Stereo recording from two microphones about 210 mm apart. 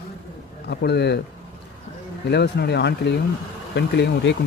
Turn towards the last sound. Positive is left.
turn(degrees=55)  # may be behind; listen again after turning